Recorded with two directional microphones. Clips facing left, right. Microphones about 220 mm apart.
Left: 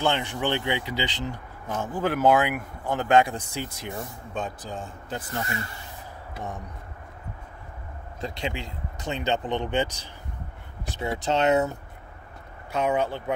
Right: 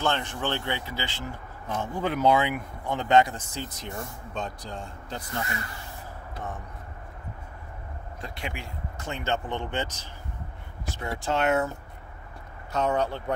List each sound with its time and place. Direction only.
0.0 s speech: 15° left (ahead or behind)
1.7 s speech: 5° left (ahead or behind)
8.2 s speech: 25° left (ahead or behind)
12.7 s speech: 10° left (ahead or behind)